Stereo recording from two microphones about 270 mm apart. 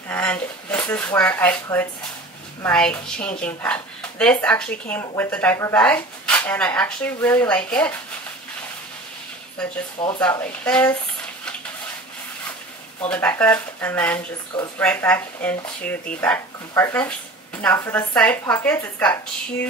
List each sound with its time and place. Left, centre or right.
0.1 s speech: centre
10.0 s speech: centre
10.3 s speech: centre
13.1 s a woman's voice: centre